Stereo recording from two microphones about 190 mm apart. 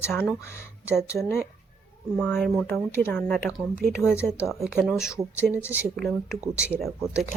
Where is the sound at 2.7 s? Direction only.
10° left (ahead or behind).